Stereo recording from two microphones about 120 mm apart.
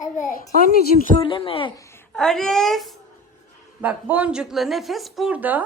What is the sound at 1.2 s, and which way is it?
Speech, 50° left (ahead or behind).